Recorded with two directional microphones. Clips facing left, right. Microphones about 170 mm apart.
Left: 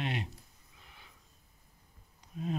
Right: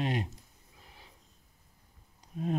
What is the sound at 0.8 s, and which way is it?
Snort, 35° right (ahead or behind).